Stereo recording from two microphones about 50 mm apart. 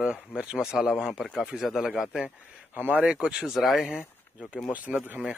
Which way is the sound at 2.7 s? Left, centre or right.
Right.